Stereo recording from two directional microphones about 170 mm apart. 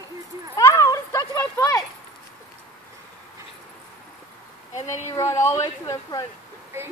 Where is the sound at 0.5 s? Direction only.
20° left (ahead or behind).